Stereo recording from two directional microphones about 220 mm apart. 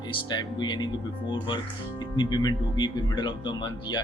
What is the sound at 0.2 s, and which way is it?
Speech, 20° left (ahead or behind).